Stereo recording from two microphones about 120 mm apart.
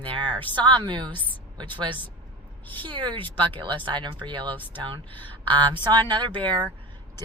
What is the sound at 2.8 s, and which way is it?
Speech, 45° right (ahead or behind).